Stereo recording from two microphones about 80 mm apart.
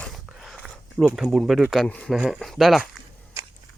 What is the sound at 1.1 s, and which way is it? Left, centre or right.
Speech, centre.